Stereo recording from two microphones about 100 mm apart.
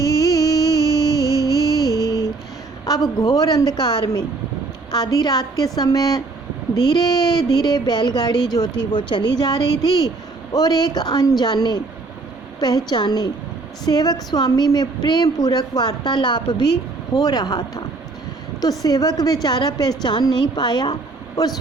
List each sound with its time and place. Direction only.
0.0 s music: 35° left (ahead or behind)
2.8 s a sound: 40° left (ahead or behind)
3.3 s a woman's voice: 35° left (ahead or behind)